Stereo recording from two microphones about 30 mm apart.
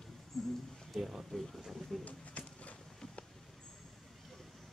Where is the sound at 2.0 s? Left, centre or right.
Left.